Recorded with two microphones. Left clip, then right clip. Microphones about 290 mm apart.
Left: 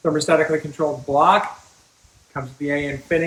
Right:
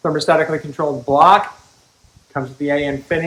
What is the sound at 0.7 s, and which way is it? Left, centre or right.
Speech, centre.